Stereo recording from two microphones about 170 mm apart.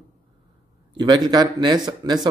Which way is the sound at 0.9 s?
25° right (ahead or behind).